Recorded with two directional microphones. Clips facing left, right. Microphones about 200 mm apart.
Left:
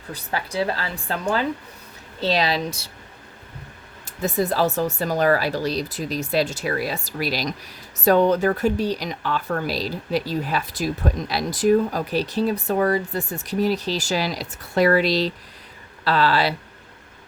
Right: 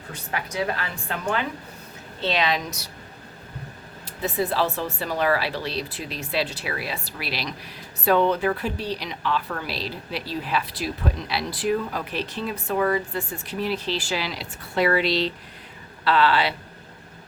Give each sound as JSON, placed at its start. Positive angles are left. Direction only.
{"t": 0.1, "sound": "speech", "side_deg": 35}
{"t": 2.2, "sound": "speech", "side_deg": 35}
{"t": 4.0, "sound": "speech", "side_deg": 45}